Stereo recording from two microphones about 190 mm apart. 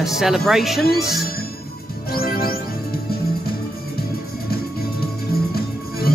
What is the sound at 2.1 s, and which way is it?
Music, 50° left (ahead or behind).